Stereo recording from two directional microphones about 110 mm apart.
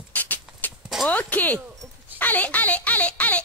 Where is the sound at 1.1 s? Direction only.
15° left (ahead or behind).